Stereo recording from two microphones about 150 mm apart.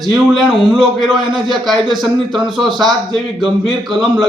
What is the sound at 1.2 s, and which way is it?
Speech, 30° right (ahead or behind).